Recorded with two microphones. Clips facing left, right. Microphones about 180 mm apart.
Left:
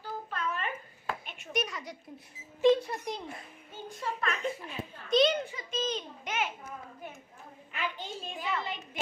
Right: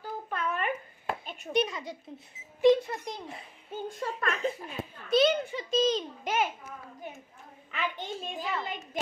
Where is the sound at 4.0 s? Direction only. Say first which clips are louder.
Right 1 dB; 45° right (ahead or behind).